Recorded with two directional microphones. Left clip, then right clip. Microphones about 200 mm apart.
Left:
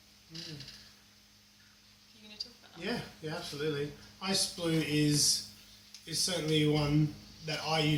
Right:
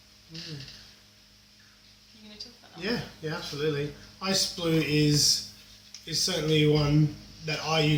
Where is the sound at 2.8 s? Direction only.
5° right (ahead or behind).